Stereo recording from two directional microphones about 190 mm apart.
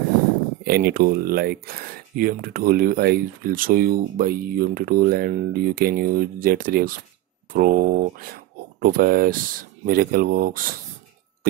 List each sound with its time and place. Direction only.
0.7 s speech: 55° right (ahead or behind)